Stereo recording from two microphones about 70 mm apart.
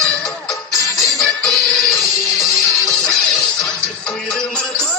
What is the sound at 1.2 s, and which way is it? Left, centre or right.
Music, centre.